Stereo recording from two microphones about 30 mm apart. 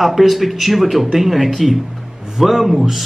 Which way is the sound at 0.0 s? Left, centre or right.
Centre.